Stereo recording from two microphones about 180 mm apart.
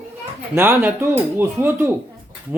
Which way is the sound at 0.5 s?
10° right (ahead or behind).